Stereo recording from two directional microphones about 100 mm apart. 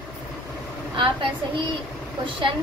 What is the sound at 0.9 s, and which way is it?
Speech, 60° right (ahead or behind).